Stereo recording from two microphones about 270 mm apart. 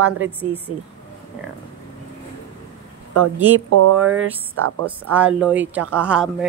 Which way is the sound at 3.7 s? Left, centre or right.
Right.